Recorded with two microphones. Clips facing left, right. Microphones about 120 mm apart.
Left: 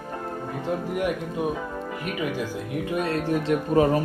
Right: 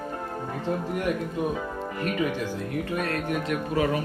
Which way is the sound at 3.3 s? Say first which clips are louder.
Left 8 dB; 35° left (ahead or behind).